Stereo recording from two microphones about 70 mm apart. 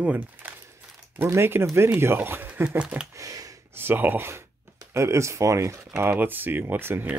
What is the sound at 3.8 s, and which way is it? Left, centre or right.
Speech, right.